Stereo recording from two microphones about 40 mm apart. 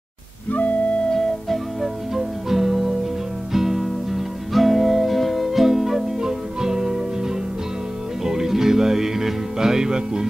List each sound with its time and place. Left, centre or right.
0.5 s music: left
1.8 s music: centre
8.2 s music: centre